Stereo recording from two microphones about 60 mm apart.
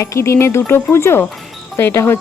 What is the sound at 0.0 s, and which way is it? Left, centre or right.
Speech, left.